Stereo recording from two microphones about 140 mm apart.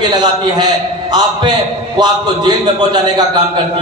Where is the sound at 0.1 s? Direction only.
30° right (ahead or behind).